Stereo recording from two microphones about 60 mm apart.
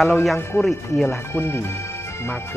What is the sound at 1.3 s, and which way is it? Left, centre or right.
Speech, left.